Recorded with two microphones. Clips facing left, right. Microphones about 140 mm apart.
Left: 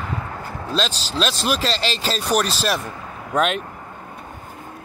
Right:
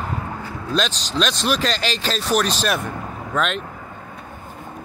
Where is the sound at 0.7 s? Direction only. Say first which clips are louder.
Right 1 dB; 30° left (ahead or behind).